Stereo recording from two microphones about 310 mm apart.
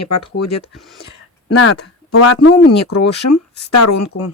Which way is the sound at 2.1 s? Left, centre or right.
Left.